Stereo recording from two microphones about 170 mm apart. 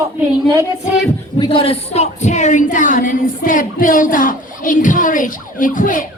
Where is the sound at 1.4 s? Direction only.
30° left (ahead or behind).